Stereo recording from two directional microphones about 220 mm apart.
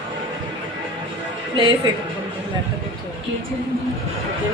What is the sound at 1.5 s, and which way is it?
Speech, 20° right (ahead or behind).